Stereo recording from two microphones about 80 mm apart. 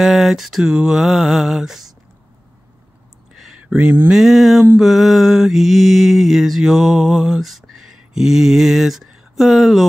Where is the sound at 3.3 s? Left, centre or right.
Centre.